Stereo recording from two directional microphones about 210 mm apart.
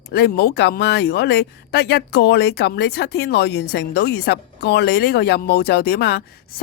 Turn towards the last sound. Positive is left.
turn(degrees=45)  # may be behind; listen again after turning